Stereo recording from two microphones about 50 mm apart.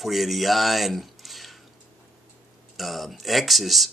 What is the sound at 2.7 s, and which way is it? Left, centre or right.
Speech, centre.